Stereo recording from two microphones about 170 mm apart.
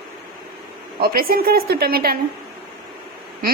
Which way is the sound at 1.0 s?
60° right (ahead or behind).